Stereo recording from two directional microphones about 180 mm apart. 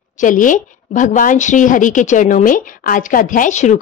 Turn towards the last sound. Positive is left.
turn(degrees=40)  # may be behind; listen again after turning